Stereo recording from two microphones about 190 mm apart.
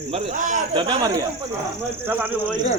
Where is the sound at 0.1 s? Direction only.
35° right (ahead or behind).